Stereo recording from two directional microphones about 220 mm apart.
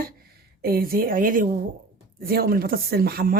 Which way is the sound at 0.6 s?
40° right (ahead or behind).